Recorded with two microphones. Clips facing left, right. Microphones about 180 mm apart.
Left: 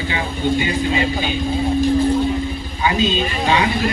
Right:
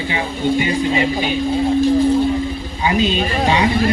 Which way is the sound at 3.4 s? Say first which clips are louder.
Right 1 dB; 25° right (ahead or behind).